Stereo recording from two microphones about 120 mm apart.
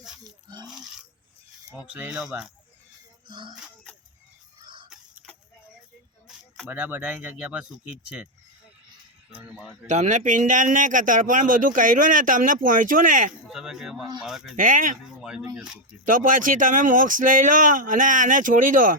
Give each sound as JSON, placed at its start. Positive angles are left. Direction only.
{"t": 0.4, "sound": "a sound", "side_deg": -35}
{"t": 1.7, "sound": "speech", "side_deg": -10}
{"t": 3.2, "sound": "music", "side_deg": -40}
{"t": 4.6, "sound": "fowl", "side_deg": -45}
{"t": 4.9, "sound": "chicken", "side_deg": -5}
{"t": 6.7, "sound": "speech", "side_deg": -15}
{"t": 9.3, "sound": "speech", "side_deg": -15}
{"t": 9.9, "sound": "speech", "side_deg": -75}
{"t": 13.5, "sound": "speech", "side_deg": -5}
{"t": 14.5, "sound": "speech", "side_deg": -90}
{"t": 15.2, "sound": "speech", "side_deg": -5}
{"t": 16.0, "sound": "speech", "side_deg": -90}